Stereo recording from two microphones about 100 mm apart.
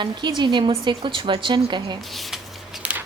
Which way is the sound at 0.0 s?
50° right (ahead or behind).